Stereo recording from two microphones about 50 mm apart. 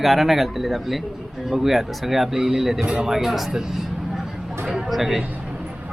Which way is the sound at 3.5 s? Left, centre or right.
Centre.